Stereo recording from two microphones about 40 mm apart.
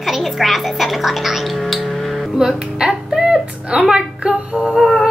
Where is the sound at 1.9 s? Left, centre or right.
Centre.